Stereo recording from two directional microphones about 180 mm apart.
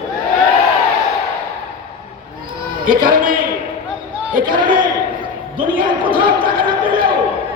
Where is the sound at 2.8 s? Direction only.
50° right (ahead or behind).